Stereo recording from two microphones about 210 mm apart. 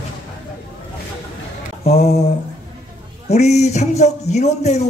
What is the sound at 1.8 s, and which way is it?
Speech, 30° left (ahead or behind).